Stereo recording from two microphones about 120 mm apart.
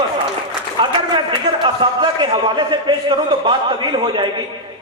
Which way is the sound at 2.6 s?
40° right (ahead or behind).